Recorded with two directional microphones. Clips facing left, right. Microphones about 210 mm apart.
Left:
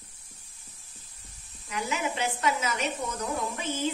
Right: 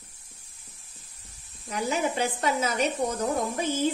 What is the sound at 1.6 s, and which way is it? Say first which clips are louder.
Speech: right 4 dB; 35° right (ahead or behind).